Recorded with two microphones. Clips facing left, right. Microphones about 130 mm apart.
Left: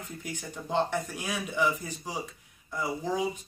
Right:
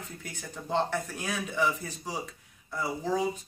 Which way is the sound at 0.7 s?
5° left (ahead or behind).